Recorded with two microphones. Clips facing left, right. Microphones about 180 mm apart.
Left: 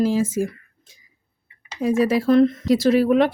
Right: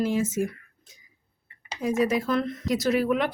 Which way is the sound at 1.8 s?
30° left (ahead or behind).